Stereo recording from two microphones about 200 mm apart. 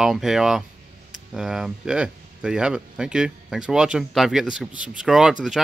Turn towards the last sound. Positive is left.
turn(degrees=-5)  # may be behind; listen again after turning